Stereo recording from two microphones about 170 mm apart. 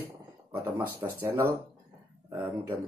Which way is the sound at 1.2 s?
15° right (ahead or behind).